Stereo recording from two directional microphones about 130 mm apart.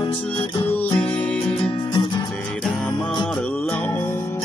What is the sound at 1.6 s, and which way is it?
Music, 40° left (ahead or behind).